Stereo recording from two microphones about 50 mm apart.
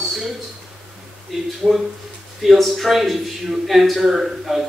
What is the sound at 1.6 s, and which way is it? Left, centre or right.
Speech, right.